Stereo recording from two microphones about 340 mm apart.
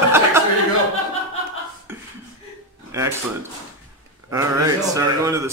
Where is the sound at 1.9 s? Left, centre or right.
Centre.